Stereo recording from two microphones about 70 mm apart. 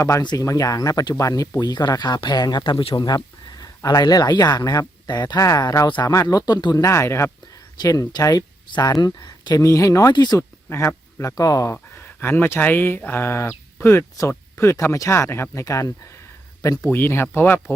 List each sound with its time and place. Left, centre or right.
0.3 s speech: left
3.8 s speech: left
5.8 s speech: left
6.8 s speech: left
7.8 s speech: left
9.6 s speech: left
10.1 s speech: left
10.3 s speech: left
11.3 s speech: left
11.7 s speech: left
16.8 s speech: left